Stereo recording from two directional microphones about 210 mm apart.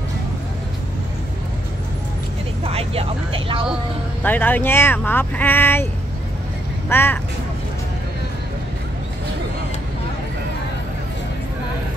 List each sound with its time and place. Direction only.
2.6 s speech: 30° right (ahead or behind)
4.2 s speech: 10° left (ahead or behind)
6.9 s speech: 10° left (ahead or behind)